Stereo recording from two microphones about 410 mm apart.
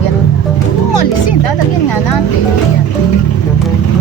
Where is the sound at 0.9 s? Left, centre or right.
Left.